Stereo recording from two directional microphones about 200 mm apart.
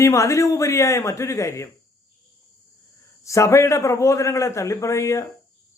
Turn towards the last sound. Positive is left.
turn(degrees=15)  # may be behind; listen again after turning